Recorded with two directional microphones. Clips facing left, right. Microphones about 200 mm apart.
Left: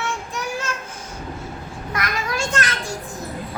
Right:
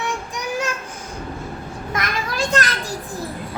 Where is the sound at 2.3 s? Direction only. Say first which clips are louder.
Right 5 dB; 35° right (ahead or behind).